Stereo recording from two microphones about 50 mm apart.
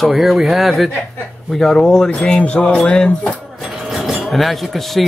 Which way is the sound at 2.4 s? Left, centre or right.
Left.